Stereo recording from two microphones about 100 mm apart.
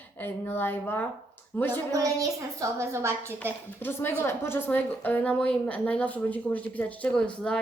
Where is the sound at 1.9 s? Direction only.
35° right (ahead or behind).